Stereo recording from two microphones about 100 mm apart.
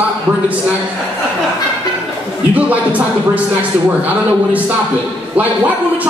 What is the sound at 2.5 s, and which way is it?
Speech, 15° right (ahead or behind).